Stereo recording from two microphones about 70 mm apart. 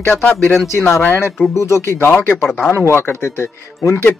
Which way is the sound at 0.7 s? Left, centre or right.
Left.